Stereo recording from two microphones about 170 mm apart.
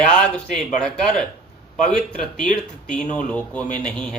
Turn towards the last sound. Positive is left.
turn(degrees=5)  # may be behind; listen again after turning